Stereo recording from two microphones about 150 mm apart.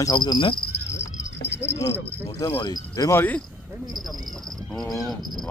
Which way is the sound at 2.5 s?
25° left (ahead or behind).